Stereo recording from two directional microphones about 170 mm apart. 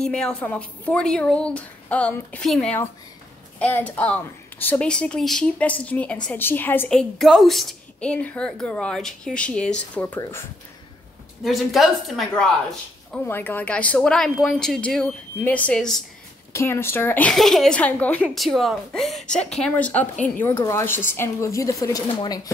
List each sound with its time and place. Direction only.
0.0 s a woman's voice: 5° left (ahead or behind)
11.4 s a woman's voice: centre (ahead or behind)
16.5 s a woman's voice: 15° left (ahead or behind)